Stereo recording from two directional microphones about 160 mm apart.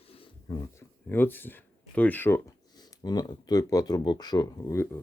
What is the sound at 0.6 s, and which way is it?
Speech, 15° left (ahead or behind).